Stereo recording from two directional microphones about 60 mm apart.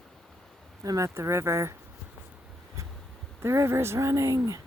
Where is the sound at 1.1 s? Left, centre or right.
Right.